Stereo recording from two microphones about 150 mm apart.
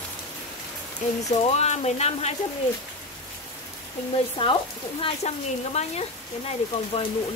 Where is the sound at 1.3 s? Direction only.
45° left (ahead or behind).